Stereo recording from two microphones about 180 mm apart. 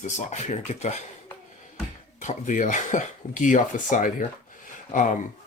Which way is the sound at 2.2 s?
45° left (ahead or behind).